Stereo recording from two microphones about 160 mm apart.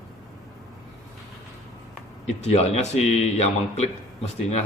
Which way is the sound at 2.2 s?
45° left (ahead or behind).